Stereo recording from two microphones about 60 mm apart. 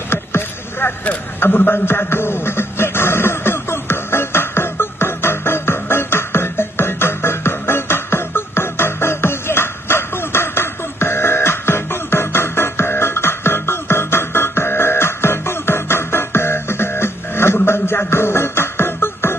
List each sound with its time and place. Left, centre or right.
0.1 s rowboat: left
1.4 s a sound: left
17.6 s music: left